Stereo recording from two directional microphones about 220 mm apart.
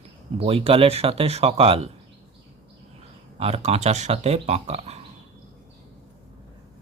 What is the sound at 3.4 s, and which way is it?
Speech, 30° right (ahead or behind).